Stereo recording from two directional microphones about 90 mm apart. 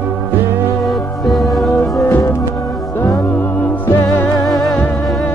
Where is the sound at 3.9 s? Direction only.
40° left (ahead or behind).